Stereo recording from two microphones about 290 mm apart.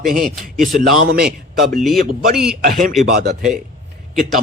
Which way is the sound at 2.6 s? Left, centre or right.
Right.